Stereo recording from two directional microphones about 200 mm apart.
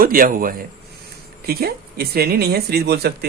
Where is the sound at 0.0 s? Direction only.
45° right (ahead or behind).